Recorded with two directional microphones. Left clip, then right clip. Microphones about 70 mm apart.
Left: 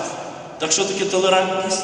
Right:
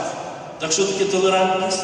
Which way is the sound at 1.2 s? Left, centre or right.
Left.